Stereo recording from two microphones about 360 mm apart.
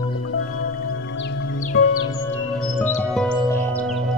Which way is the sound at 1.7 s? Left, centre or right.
Left.